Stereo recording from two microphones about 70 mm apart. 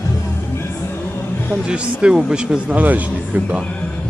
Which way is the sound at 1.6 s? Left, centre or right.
Centre.